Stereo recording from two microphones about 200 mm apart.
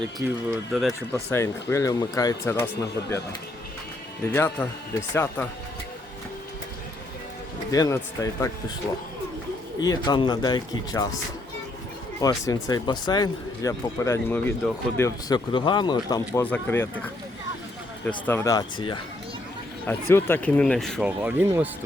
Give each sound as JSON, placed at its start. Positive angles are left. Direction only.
{"t": 0.2, "sound": "speech", "side_deg": -10}
{"t": 1.3, "sound": "speech", "side_deg": 15}
{"t": 4.3, "sound": "speech", "side_deg": 10}
{"t": 7.7, "sound": "speech", "side_deg": 15}
{"t": 9.8, "sound": "speech", "side_deg": 20}
{"t": 12.5, "sound": "speech", "side_deg": 20}
{"t": 18.3, "sound": "speech", "side_deg": 15}
{"t": 19.8, "sound": "speech", "side_deg": 10}